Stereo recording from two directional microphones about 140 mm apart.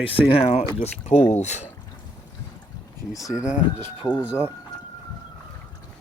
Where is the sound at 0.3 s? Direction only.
45° left (ahead or behind).